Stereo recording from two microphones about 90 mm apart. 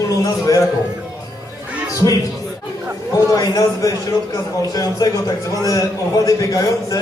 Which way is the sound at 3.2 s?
40° left (ahead or behind).